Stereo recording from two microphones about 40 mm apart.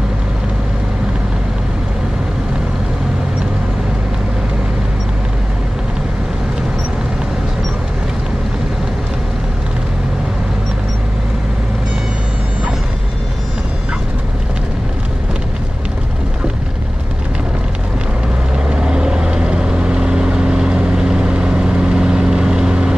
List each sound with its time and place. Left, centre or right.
18.7 s vehicle: right